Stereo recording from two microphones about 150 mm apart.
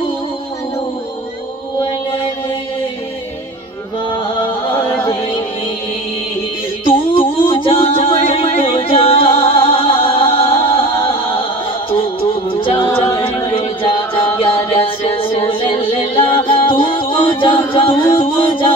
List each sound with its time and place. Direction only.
4.2 s music: 35° left (ahead or behind)
4.7 s music: 15° left (ahead or behind)
6.8 s music: 35° left (ahead or behind)
12.8 s a capella: 20° left (ahead or behind)
13.6 s music: 35° left (ahead or behind)